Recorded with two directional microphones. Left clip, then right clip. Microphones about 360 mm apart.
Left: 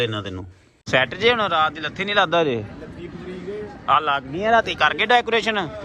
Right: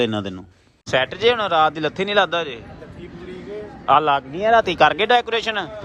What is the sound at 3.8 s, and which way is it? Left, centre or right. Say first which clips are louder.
A man's voice: right 3 dB; centre.